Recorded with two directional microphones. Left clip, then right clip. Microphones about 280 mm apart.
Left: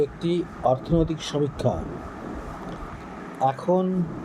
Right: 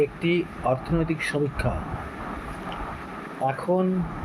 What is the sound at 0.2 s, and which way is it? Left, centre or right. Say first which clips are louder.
Speech: right 2 dB; left.